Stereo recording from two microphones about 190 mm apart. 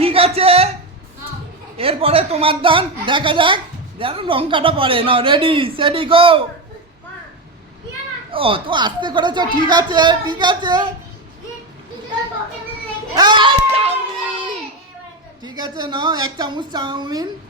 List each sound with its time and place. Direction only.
0.0 s a sound: 30° right (ahead or behind)
1.8 s a woman's voice: 30° right (ahead or behind)
8.3 s a woman's voice: 30° right (ahead or behind)
13.1 s a child's voice: 25° right (ahead or behind)
15.4 s a woman's voice: 20° right (ahead or behind)